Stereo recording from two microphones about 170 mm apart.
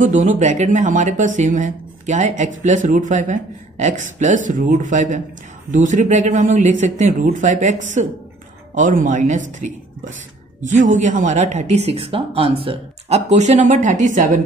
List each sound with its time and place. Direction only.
0.0 s speech: 45° right (ahead or behind)